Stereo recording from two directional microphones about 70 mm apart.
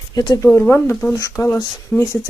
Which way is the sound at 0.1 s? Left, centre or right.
Left.